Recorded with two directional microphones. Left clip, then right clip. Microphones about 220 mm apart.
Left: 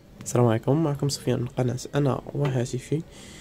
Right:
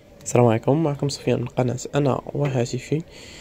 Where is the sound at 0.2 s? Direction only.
5° right (ahead or behind).